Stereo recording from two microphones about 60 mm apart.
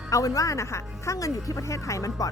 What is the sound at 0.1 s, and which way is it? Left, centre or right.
A woman's voice, left.